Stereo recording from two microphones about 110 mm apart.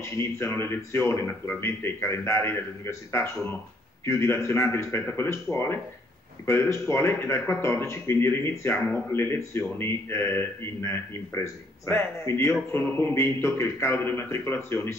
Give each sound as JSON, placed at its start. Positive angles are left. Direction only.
{"t": 0.0, "sound": "speech", "side_deg": 25}